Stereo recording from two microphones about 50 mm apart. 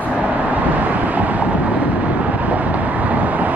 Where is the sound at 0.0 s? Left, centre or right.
Right.